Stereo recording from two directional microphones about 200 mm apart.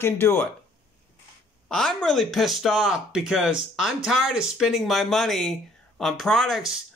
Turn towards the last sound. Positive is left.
turn(degrees=0)  # may be behind; listen again after turning